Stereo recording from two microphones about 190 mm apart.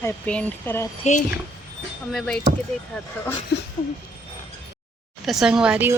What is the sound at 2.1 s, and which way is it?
Speech, 5° left (ahead or behind).